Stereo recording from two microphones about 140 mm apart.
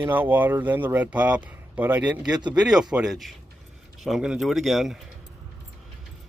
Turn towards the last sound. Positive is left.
turn(degrees=0)  # may be behind; listen again after turning